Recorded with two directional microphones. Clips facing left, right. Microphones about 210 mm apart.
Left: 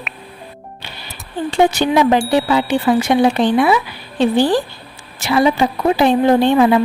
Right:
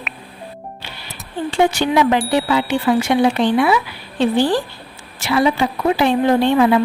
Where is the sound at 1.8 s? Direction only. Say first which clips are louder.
Left 2 dB; 40° left (ahead or behind).